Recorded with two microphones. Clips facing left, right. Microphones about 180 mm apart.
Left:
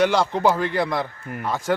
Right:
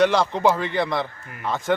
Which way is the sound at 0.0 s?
Centre (ahead or behind).